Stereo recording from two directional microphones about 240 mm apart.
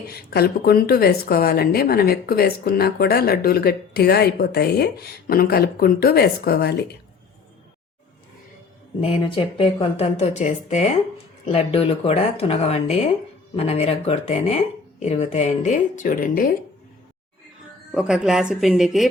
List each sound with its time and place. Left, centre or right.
0.1 s speech: left
9.0 s speech: left
17.9 s a woman's voice: centre